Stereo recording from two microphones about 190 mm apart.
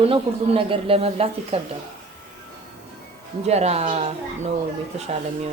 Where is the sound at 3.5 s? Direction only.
35° right (ahead or behind).